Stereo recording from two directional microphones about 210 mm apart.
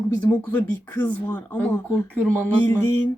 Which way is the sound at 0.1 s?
10° left (ahead or behind).